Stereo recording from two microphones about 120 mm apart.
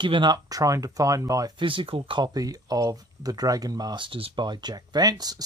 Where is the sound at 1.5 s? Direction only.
45° right (ahead or behind).